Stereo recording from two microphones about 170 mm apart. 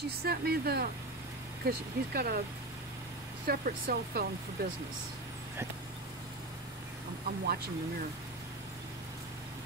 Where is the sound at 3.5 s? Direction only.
60° right (ahead or behind).